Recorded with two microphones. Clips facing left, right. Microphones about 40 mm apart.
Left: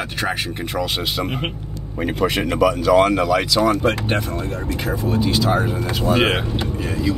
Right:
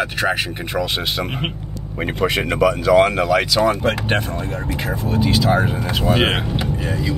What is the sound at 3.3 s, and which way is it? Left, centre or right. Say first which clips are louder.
Speech: right 1 dB; centre.